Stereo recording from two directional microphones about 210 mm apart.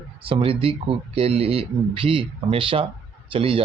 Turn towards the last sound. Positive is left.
turn(degrees=-25)  # may be behind; listen again after turning